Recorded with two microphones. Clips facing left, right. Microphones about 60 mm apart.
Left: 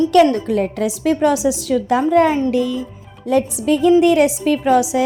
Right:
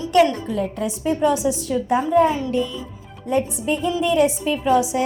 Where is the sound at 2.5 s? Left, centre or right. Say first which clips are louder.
Left 5 dB; left.